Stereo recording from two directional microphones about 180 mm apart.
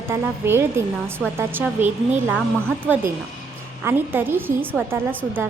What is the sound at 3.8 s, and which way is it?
A woman's voice, 10° right (ahead or behind).